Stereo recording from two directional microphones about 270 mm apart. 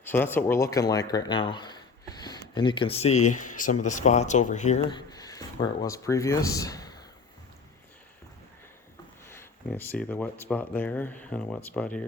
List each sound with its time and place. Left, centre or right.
0.0 s speech: centre
9.3 s speech: centre